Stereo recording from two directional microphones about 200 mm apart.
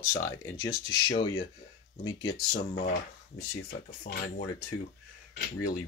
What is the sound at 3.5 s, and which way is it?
Speech, 50° left (ahead or behind).